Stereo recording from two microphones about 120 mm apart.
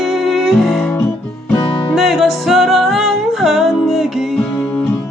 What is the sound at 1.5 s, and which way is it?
Music, 45° left (ahead or behind).